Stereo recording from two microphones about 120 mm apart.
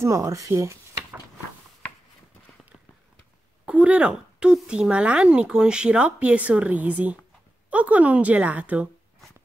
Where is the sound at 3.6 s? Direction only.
10° right (ahead or behind).